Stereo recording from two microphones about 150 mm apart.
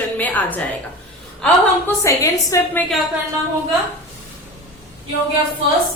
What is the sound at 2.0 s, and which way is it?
Speech, 20° left (ahead or behind).